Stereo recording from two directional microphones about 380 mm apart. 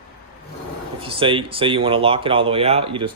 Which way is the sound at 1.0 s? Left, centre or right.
Centre.